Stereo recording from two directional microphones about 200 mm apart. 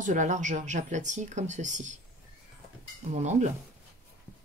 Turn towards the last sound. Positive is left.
turn(degrees=-35)  # may be behind; listen again after turning